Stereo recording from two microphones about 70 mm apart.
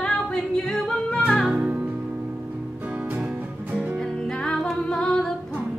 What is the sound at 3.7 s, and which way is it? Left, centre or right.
Music, right.